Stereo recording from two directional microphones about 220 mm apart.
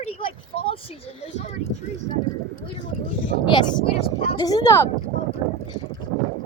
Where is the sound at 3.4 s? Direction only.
20° left (ahead or behind).